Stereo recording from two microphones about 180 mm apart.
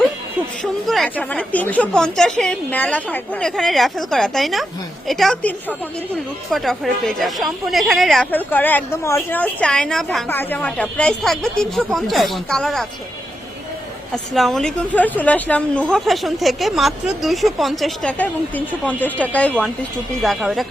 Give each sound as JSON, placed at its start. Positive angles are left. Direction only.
{"t": 0.6, "sound": "speech", "side_deg": 0}
{"t": 14.3, "sound": "speech", "side_deg": 0}